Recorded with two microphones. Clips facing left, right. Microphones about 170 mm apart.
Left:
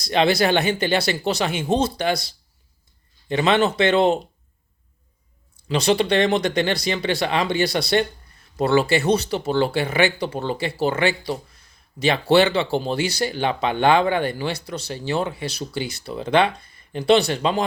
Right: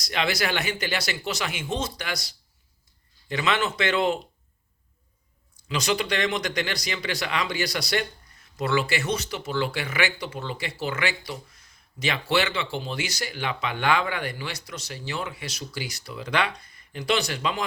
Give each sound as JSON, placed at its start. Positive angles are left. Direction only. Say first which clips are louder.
{"t": 0.0, "sound": "speech", "louder": "left 8 dB", "side_deg": 30}
{"t": 5.6, "sound": "speech", "louder": "left 7 dB", "side_deg": 30}